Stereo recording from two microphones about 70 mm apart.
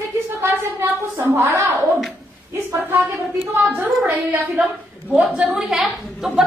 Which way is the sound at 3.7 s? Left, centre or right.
Right.